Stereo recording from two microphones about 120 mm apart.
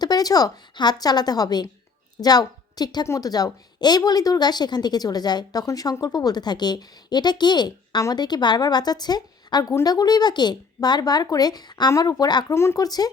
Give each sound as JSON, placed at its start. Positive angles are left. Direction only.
{"t": 0.0, "sound": "a woman's voice", "side_deg": 35}